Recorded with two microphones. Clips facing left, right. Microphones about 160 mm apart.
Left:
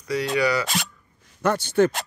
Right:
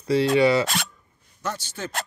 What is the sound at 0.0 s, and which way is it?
Speech, 30° right (ahead or behind).